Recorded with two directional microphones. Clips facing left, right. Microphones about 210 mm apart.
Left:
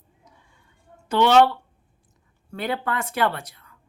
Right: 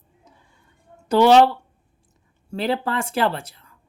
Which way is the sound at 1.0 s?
35° right (ahead or behind).